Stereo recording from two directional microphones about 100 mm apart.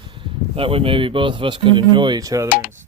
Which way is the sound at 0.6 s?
65° right (ahead or behind).